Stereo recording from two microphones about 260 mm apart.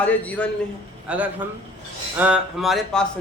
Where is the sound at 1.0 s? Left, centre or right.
Centre.